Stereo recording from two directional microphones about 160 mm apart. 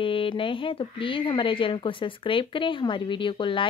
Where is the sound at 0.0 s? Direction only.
35° left (ahead or behind).